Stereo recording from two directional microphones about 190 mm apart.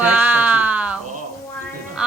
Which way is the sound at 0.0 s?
10° right (ahead or behind).